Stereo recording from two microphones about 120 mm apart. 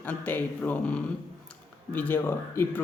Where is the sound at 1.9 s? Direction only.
15° left (ahead or behind).